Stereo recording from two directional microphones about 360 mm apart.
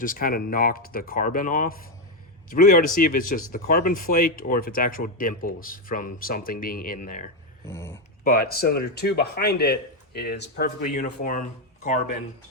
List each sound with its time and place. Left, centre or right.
0.0 s speech: left
7.7 s speech: centre
8.2 s speech: left